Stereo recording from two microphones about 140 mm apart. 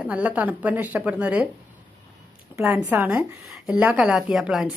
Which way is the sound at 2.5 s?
15° right (ahead or behind).